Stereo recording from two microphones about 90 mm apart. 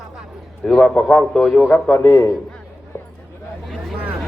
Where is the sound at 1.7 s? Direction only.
20° left (ahead or behind).